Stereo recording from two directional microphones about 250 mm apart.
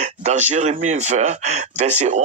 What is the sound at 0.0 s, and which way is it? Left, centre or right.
Speech, right.